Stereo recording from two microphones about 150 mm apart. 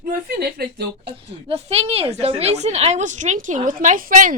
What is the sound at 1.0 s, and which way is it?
A woman's voice, 40° right (ahead or behind).